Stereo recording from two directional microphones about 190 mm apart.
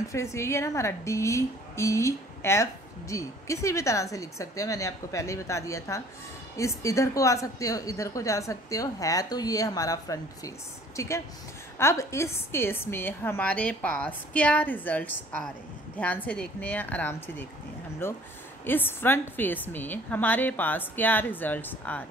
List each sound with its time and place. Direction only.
0.1 s speech: 15° left (ahead or behind)